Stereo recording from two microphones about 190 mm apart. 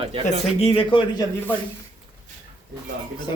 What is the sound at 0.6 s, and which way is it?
Speech, 30° left (ahead or behind).